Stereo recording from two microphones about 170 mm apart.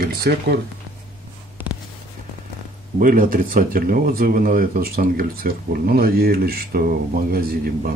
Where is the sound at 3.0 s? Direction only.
55° right (ahead or behind).